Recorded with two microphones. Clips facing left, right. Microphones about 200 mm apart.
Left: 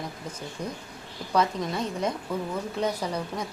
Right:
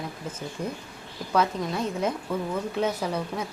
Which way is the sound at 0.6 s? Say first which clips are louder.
Right 2 dB; 5° right (ahead or behind).